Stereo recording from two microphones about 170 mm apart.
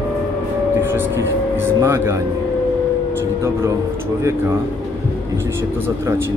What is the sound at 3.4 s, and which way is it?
Speech, 15° right (ahead or behind).